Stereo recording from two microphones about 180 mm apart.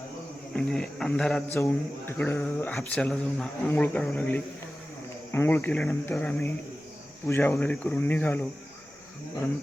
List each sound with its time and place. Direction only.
0.5 s speech: 5° left (ahead or behind)